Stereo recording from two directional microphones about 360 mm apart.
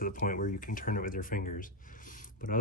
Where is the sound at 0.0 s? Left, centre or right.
Left.